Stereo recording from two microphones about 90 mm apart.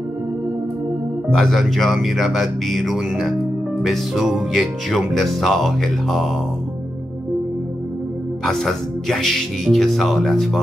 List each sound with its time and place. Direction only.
1.3 s speech: centre (ahead or behind)
8.5 s speech: 5° left (ahead or behind)